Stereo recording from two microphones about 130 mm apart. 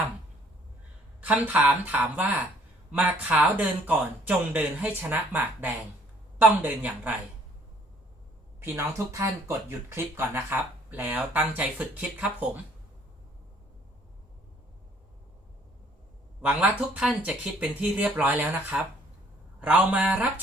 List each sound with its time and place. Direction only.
1.2 s speech: 10° right (ahead or behind)
8.6 s speech: 20° right (ahead or behind)
16.4 s speech: 10° right (ahead or behind)